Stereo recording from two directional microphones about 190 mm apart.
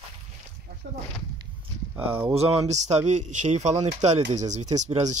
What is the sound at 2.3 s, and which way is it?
Speech, 30° right (ahead or behind).